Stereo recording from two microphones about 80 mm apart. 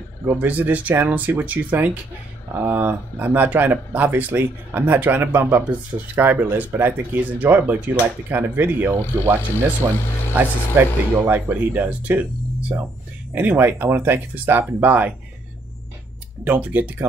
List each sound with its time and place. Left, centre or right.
0.3 s speech: right
9.8 s speech: right
10.3 s speech: right
13.3 s speech: right
16.4 s speech: centre